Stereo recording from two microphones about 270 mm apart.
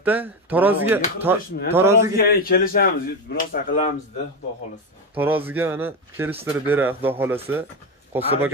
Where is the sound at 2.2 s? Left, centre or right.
Left.